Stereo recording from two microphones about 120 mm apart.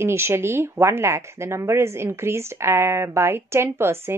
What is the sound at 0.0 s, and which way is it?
Speech, 20° right (ahead or behind).